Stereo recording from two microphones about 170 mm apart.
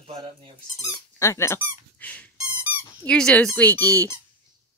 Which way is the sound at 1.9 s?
10° left (ahead or behind).